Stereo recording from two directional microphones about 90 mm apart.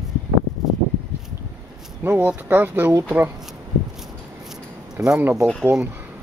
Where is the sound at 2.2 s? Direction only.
20° right (ahead or behind).